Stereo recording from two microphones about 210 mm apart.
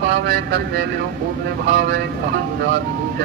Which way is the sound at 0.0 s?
50° right (ahead or behind).